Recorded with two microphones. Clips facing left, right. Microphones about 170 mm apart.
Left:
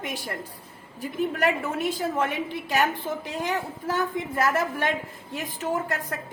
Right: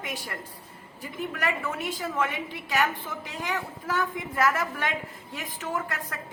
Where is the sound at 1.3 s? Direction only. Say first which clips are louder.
Left 2 dB; 35° left (ahead or behind).